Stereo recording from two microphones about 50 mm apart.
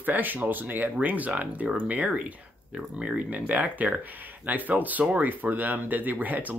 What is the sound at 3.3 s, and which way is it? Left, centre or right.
Speech, right.